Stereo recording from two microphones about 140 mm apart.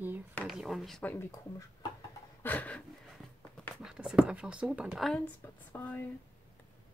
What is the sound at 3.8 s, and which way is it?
Speech, 5° right (ahead or behind).